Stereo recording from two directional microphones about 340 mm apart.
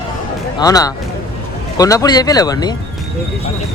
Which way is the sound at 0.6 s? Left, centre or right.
Centre.